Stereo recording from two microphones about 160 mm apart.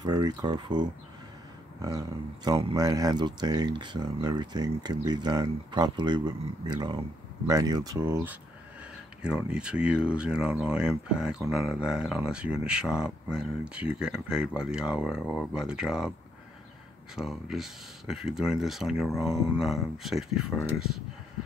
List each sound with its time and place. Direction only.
0.0 s speech: 25° right (ahead or behind); by 16.1 s 5° right (ahead or behind)
17.1 s speech: centre (ahead or behind)